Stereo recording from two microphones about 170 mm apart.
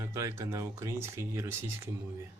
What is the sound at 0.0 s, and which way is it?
Speech, 20° right (ahead or behind).